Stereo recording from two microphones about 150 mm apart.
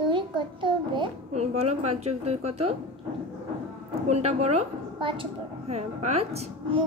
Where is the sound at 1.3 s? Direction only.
45° right (ahead or behind).